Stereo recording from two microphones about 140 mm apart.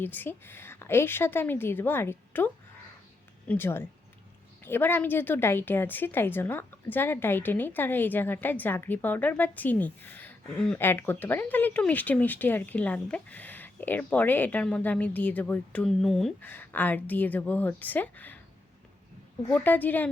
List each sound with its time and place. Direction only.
0.0 s speech: 15° left (ahead or behind)
3.5 s speech: 15° left (ahead or behind)
16.4 s speech: 15° left (ahead or behind)
19.5 s speech: 10° left (ahead or behind)